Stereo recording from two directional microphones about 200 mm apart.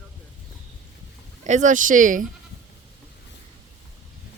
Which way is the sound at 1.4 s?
40° right (ahead or behind).